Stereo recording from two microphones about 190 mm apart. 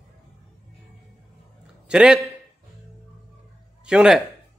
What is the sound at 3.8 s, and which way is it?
Speech, 5° right (ahead or behind).